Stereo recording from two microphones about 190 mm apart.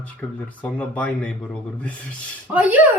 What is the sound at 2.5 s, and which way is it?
Speech, 10° right (ahead or behind).